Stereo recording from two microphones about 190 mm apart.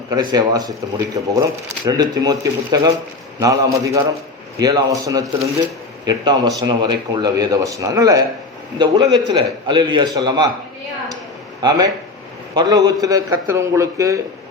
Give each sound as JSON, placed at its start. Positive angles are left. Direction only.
{"t": 0.1, "sound": "a man's voice", "side_deg": -20}
{"t": 11.6, "sound": "a man's voice", "side_deg": -20}